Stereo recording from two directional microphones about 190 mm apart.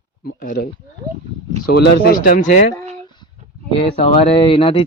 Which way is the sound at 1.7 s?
55° left (ahead or behind).